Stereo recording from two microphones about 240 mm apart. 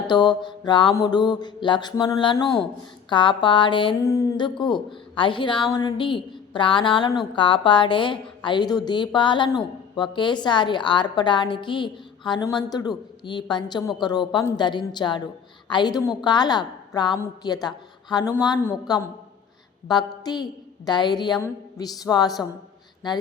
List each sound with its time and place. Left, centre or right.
0.1 s a woman's voice: centre